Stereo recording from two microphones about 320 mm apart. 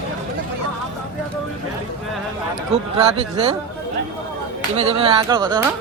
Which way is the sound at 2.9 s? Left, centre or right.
Centre.